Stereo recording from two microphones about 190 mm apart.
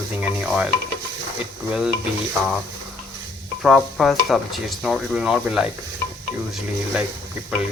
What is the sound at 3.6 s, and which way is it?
Stir, centre (ahead or behind).